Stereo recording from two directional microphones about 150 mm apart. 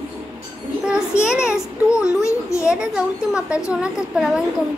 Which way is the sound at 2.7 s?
5° right (ahead or behind).